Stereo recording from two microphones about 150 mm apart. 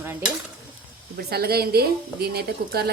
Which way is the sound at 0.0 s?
15° right (ahead or behind).